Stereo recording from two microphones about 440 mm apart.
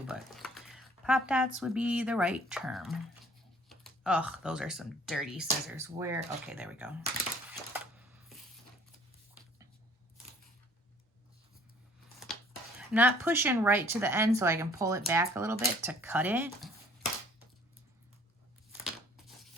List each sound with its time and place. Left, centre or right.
0.1 s a sound: centre
1.5 s speech: centre
7.7 s coin: centre
12.9 s speech: centre